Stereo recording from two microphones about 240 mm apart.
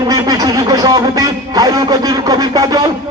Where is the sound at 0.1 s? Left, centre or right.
Centre.